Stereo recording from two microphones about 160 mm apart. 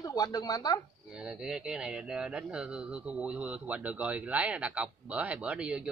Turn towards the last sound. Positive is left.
turn(degrees=-5)  # may be behind; listen again after turning